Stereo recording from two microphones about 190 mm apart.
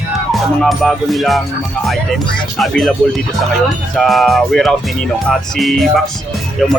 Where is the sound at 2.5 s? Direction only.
Centre (ahead or behind).